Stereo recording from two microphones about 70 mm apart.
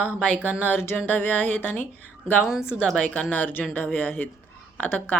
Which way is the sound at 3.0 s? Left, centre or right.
Left.